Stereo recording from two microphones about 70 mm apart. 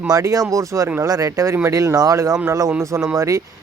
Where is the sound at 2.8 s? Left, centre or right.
Right.